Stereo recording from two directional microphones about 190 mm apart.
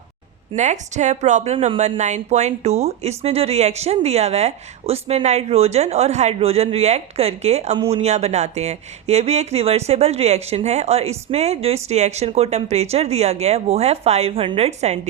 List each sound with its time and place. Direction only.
0.5 s a woman's voice: 40° right (ahead or behind)